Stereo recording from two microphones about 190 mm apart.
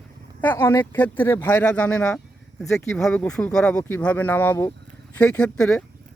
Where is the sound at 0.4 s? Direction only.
10° left (ahead or behind).